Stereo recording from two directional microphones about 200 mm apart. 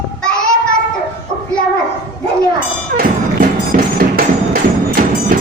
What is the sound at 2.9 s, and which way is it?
Music, 50° right (ahead or behind).